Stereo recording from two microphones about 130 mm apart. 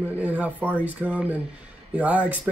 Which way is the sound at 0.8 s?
10° right (ahead or behind).